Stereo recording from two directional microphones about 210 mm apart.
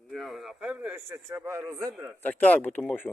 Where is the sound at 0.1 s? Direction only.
Centre (ahead or behind).